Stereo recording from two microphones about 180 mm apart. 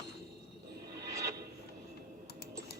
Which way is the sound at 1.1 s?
15° right (ahead or behind).